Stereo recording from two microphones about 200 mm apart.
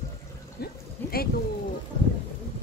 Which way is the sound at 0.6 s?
50° left (ahead or behind).